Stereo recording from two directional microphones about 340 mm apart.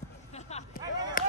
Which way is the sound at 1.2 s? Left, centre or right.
Left.